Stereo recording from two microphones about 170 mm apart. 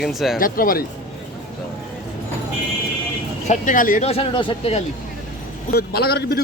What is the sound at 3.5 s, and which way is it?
Speech, 50° left (ahead or behind).